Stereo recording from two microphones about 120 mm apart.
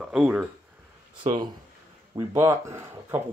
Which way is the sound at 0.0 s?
5° right (ahead or behind).